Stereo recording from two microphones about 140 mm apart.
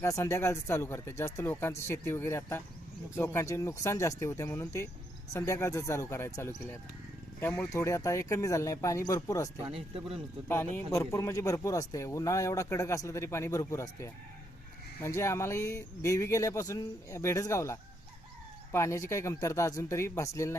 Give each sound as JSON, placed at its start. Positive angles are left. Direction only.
{"t": 0.0, "sound": "speech", "side_deg": 20}
{"t": 9.7, "sound": "speech", "side_deg": -45}
{"t": 10.5, "sound": "speech", "side_deg": 15}